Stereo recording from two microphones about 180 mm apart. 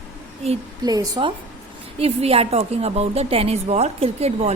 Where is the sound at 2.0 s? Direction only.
35° right (ahead or behind).